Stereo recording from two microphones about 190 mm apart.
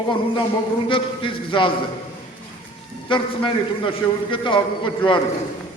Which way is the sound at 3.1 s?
25° left (ahead or behind).